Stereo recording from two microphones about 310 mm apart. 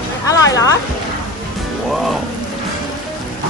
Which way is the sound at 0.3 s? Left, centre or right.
Centre.